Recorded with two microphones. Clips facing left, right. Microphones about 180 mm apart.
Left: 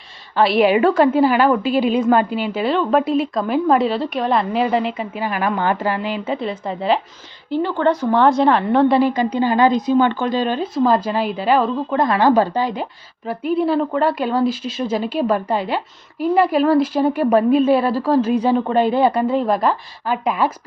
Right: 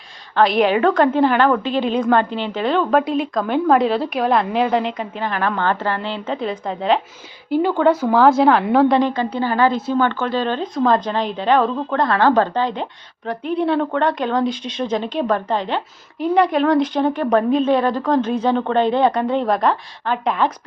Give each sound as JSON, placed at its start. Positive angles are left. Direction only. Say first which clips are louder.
{"t": 0.3, "sound": "a woman's voice", "louder": "left 1 dB", "side_deg": 5}